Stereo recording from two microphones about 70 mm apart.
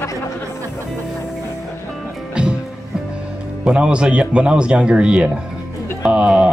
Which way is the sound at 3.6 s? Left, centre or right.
Centre.